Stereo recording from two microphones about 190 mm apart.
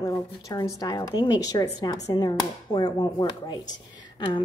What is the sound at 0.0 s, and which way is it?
Speech, 20° left (ahead or behind).